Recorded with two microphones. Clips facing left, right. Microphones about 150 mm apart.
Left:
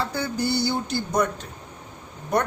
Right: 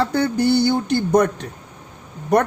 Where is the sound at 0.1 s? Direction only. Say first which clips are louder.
Right 8 dB; 60° right (ahead or behind).